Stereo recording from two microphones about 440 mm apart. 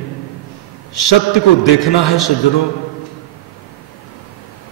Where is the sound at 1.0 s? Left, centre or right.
Left.